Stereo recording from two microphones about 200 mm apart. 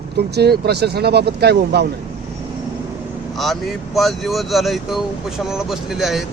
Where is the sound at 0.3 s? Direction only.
55° right (ahead or behind).